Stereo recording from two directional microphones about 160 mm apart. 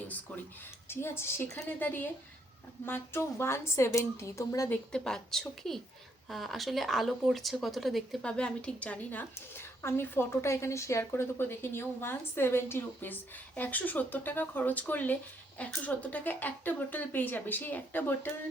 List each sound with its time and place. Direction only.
0.9 s speech: 15° left (ahead or behind)
4.7 s speech: 5° left (ahead or behind)